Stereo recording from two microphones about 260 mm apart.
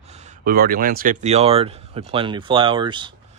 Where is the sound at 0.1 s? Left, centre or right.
Right.